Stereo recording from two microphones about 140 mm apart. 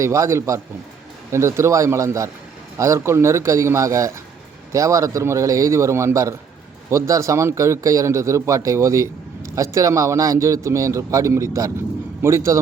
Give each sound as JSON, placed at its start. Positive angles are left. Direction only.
{"t": 0.0, "sound": "speech", "side_deg": -20}